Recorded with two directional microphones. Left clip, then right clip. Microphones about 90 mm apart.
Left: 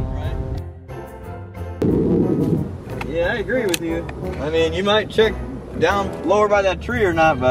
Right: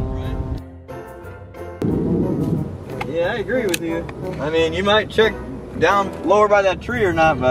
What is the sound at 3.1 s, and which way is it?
Vehicle, 20° right (ahead or behind).